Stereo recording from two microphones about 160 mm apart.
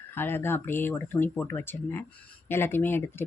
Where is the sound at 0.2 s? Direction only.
15° left (ahead or behind).